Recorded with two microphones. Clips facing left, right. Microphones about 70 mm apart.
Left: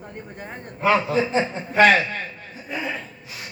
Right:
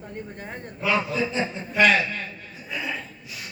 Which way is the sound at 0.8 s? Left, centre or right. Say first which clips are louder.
Left 5 dB; left.